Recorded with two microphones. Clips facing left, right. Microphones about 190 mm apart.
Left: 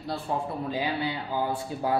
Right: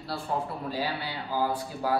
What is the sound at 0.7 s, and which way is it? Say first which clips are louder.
Speech: left 3 dB; 20° left (ahead or behind).